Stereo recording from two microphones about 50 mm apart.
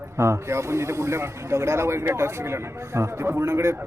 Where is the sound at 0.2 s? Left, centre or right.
Right.